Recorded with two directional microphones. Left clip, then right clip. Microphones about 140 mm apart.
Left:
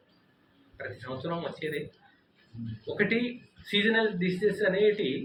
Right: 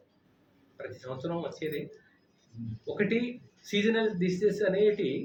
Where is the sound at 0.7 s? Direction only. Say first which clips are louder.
Left 2 dB; 15° right (ahead or behind).